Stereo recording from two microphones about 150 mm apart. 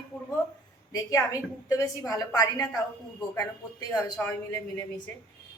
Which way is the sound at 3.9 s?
20° left (ahead or behind).